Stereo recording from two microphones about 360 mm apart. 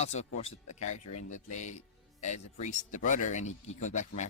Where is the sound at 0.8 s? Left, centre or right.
Left.